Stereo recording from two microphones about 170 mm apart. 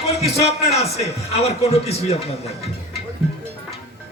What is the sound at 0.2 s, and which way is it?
A man's voice, 40° left (ahead or behind).